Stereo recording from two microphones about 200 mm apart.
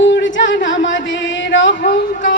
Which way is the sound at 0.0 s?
65° left (ahead or behind).